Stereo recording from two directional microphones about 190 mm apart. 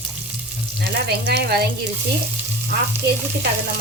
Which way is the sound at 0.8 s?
60° right (ahead or behind).